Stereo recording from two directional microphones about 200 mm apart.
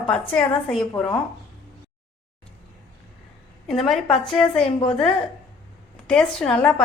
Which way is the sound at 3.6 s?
Centre (ahead or behind).